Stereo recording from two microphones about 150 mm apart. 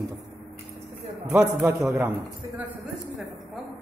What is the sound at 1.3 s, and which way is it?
Speech, 5° right (ahead or behind).